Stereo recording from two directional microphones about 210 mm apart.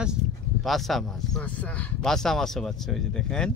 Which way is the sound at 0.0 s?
Centre (ahead or behind).